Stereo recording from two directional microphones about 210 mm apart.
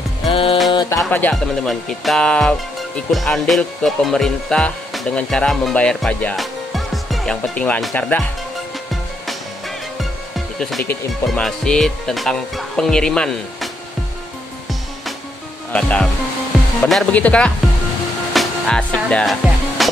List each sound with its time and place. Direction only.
0.3 s music: 25° left (ahead or behind)
1.0 s speech: 5° left (ahead or behind)
3.1 s music: centre (ahead or behind)
10.6 s speech: 5° left (ahead or behind)
15.7 s speech: 5° left (ahead or behind)
18.3 s music: centre (ahead or behind)